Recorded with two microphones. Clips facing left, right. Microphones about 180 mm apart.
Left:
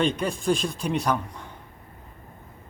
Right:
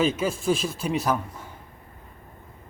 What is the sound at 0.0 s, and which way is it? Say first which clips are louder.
Speech: right 1 dB; 5° right (ahead or behind).